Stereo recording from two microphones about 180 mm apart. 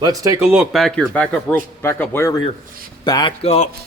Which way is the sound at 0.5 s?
Centre (ahead or behind).